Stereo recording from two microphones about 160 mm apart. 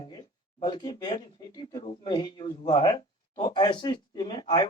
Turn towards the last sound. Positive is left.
turn(degrees=35)  # may be behind; listen again after turning